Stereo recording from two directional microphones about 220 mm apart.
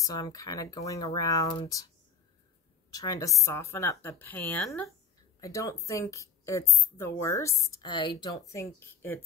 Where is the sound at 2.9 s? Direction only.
15° left (ahead or behind).